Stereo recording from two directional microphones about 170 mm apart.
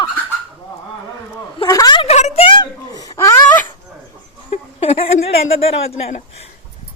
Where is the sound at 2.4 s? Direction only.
25° left (ahead or behind).